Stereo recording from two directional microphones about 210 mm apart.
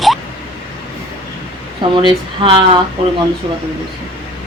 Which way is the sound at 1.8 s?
25° right (ahead or behind).